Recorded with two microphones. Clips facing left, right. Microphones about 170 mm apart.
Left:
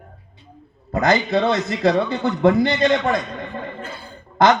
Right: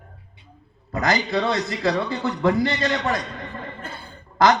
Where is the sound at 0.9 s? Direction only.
25° left (ahead or behind).